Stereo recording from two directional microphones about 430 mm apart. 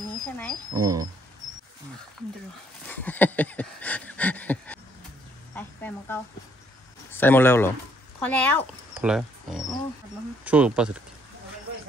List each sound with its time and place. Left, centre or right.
0.4 s speech: centre
2.9 s a sound: centre
5.5 s speech: centre